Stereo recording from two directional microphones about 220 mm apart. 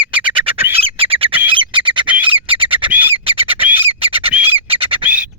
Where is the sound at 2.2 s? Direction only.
25° right (ahead or behind).